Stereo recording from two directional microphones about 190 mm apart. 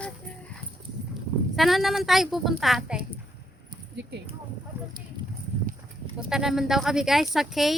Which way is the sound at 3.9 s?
65° right (ahead or behind).